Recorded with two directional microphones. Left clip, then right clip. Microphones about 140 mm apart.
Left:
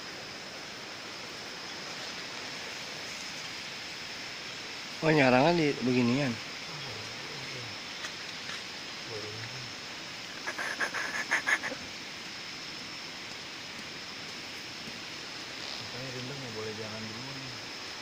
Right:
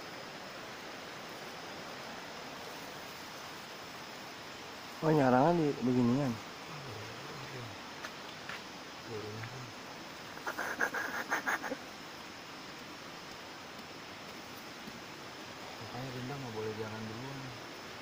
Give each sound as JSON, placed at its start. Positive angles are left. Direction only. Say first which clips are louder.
{"t": 5.0, "sound": "speech", "louder": "left 4 dB", "side_deg": 25}
{"t": 5.5, "sound": "speech", "louder": "left 4 dB", "side_deg": 15}
{"t": 11.3, "sound": "goose", "louder": "left 7 dB", "side_deg": -15}